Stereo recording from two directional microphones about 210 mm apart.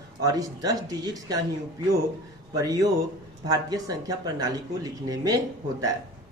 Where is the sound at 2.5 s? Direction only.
15° right (ahead or behind).